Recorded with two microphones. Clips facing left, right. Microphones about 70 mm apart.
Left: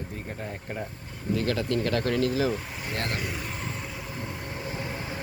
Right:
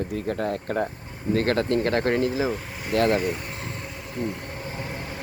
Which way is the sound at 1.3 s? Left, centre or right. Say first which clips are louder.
Right 5 dB; right.